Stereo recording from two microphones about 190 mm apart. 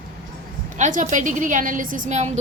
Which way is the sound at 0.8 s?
45° right (ahead or behind).